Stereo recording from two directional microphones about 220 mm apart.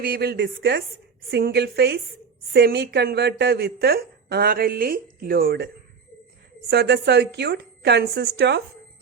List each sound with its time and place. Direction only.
0.0 s a woman's voice: 45° right (ahead or behind)
6.7 s a woman's voice: 50° right (ahead or behind)